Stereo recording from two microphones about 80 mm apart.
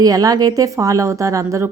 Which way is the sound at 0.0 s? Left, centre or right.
Right.